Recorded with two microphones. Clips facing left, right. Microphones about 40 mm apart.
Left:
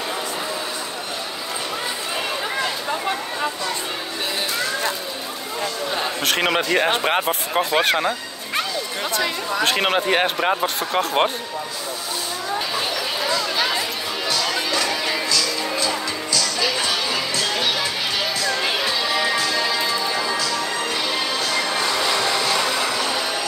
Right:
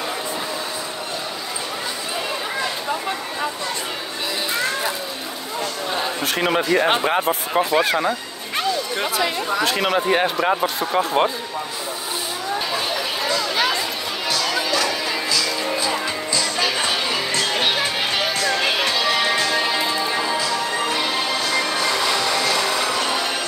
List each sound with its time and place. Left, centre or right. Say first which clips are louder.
6.2 s speech: even; left
7.1 s speech: right 1 dB; left
9.6 s speech: left 2 dB; left
14.7 s music: right 1 dB; centre
17.3 s music: right 2 dB; right
18.7 s music: right 2 dB; right